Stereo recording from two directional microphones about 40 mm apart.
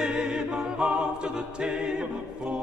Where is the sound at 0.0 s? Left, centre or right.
Centre.